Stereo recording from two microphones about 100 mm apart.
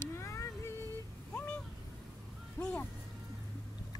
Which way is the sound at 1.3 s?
15° left (ahead or behind).